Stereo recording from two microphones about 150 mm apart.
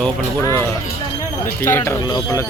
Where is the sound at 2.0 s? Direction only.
30° left (ahead or behind).